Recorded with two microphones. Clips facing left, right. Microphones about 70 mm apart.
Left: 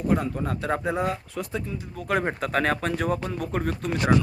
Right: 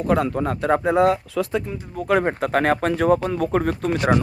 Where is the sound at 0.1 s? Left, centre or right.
Right.